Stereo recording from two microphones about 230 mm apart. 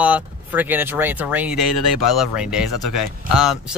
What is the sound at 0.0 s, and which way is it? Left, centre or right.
Speech, centre.